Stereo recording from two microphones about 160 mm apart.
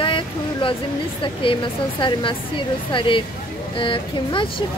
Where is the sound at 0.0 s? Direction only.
30° left (ahead or behind).